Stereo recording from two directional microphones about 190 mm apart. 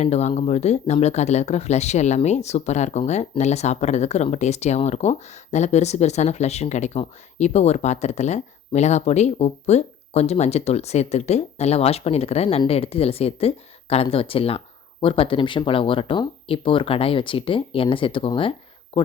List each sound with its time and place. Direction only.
0.0 s speech: 35° left (ahead or behind)